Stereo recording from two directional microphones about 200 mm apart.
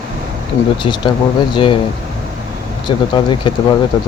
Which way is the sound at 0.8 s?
20° left (ahead or behind).